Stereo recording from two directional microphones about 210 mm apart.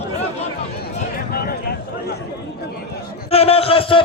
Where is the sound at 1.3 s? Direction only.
45° left (ahead or behind).